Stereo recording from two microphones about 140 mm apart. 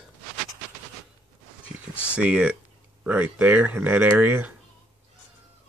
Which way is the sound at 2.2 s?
10° right (ahead or behind).